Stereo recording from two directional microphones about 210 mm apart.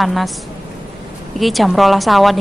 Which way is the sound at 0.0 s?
Centre (ahead or behind).